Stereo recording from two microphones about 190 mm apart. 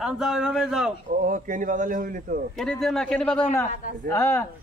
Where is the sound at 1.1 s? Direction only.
45° right (ahead or behind).